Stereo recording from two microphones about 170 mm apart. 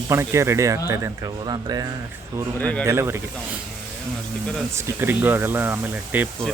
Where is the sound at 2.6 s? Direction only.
10° left (ahead or behind).